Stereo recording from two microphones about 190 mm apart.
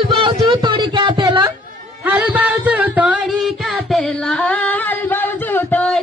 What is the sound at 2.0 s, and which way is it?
Music, 10° right (ahead or behind).